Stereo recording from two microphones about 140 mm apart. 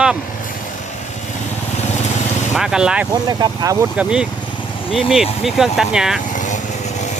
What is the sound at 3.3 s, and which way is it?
Speech, 25° right (ahead or behind).